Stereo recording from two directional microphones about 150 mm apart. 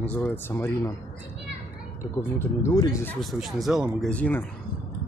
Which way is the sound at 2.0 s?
15° left (ahead or behind).